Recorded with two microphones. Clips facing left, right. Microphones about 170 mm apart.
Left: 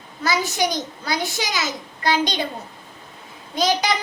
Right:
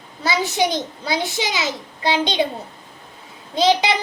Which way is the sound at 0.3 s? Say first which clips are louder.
Right 2 dB; 25° right (ahead or behind).